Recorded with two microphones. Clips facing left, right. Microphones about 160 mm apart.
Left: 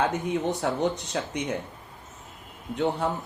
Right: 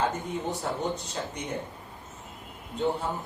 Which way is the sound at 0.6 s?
75° left (ahead or behind).